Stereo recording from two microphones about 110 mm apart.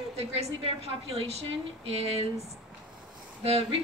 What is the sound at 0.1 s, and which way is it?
A woman's voice, 65° right (ahead or behind).